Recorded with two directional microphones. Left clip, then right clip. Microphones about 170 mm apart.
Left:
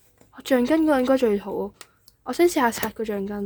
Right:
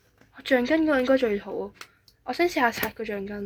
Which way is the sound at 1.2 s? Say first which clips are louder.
Left 4 dB; 90° left.